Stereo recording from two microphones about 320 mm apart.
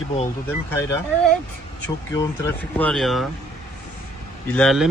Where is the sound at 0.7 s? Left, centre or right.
Centre.